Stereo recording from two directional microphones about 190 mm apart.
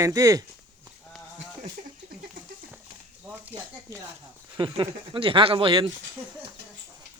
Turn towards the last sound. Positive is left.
turn(degrees=-25)  # may be behind; listen again after turning